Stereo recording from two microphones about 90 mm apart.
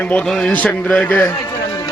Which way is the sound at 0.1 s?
10° left (ahead or behind).